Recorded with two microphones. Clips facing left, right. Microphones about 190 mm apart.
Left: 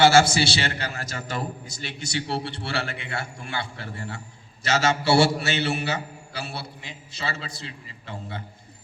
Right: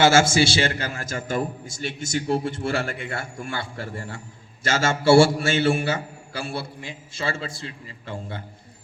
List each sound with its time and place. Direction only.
0.0 s a man's voice: 45° right (ahead or behind)